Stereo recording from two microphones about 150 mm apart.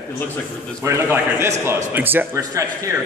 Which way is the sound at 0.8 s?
20° right (ahead or behind).